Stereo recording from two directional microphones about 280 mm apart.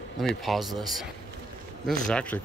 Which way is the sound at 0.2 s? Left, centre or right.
Centre.